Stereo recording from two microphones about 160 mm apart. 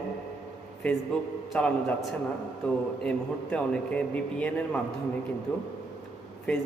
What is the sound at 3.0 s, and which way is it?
A man's voice, 5° left (ahead or behind).